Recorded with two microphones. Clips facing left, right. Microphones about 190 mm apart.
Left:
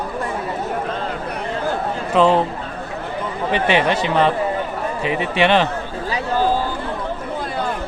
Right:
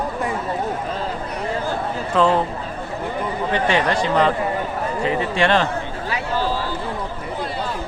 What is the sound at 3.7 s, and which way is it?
Speech, 20° left (ahead or behind).